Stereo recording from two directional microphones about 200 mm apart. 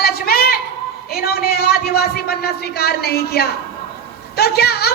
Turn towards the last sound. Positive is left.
turn(degrees=50)  # may be behind; listen again after turning